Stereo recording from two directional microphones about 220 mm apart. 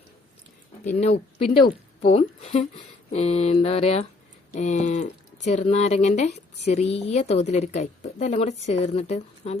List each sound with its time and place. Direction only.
0.9 s speech: 30° left (ahead or behind)
2.0 s mantra: 30° left (ahead or behind)
4.5 s speech: 30° left (ahead or behind)